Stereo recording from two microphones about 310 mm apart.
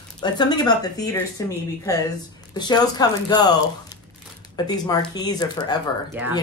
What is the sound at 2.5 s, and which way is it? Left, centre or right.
Speech, centre.